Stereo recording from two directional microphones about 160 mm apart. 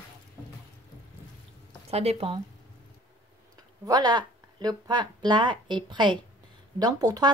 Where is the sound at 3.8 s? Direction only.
25° right (ahead or behind).